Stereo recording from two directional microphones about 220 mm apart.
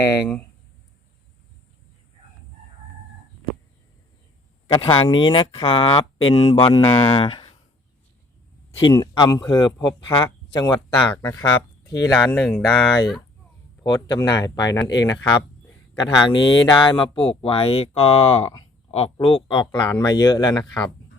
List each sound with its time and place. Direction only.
0.0 s speech: 15° left (ahead or behind)
4.7 s speech: 25° left (ahead or behind)
8.8 s speech: 20° left (ahead or behind)
12.5 s speech: centre (ahead or behind)
13.8 s speech: 20° left (ahead or behind)
16.3 s speech: 20° left (ahead or behind)